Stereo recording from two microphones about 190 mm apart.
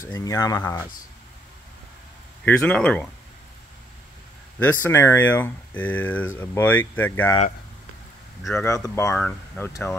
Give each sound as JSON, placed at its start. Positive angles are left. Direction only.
{"t": 0.1, "sound": "speech", "side_deg": 20}
{"t": 2.4, "sound": "speech", "side_deg": 5}
{"t": 4.6, "sound": "speech", "side_deg": 10}
{"t": 8.6, "sound": "speech", "side_deg": 15}